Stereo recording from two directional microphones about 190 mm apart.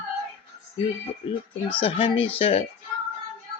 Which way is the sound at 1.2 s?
30° left (ahead or behind).